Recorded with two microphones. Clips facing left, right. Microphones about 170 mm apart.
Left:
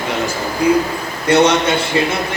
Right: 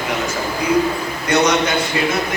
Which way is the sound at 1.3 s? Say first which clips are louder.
Left 4 dB; 30° left (ahead or behind).